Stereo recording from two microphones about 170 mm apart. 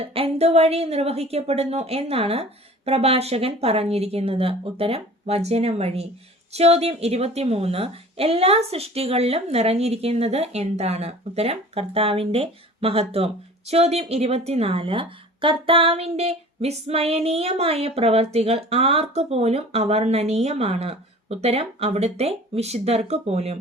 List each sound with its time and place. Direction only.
0.0 s a woman's voice: 35° right (ahead or behind)